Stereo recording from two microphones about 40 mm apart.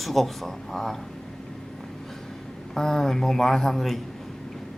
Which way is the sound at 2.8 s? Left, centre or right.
Centre.